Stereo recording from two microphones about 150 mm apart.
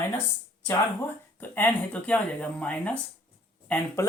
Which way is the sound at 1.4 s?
10° left (ahead or behind).